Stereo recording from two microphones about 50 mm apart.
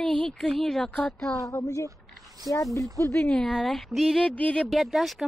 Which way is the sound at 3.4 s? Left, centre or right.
Centre.